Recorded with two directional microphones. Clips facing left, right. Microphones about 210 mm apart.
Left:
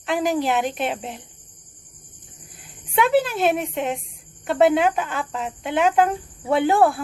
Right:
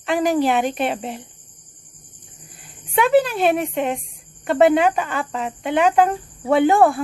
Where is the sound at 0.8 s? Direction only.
Centre (ahead or behind).